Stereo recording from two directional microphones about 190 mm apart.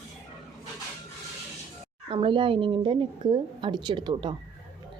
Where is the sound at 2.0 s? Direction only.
25° right (ahead or behind).